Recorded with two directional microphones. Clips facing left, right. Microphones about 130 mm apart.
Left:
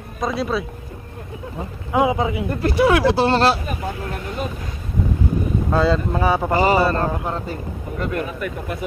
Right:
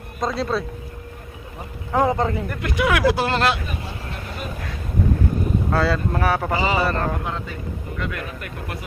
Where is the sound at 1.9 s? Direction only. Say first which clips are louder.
Left 1 dB; 10° left (ahead or behind).